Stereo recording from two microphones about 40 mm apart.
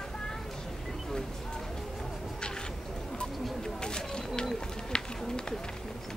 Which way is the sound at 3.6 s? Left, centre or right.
Centre.